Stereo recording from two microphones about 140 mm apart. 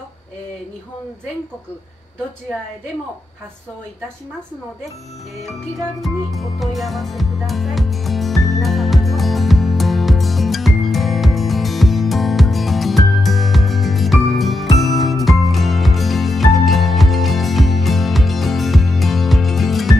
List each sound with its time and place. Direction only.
5.9 s music: centre (ahead or behind)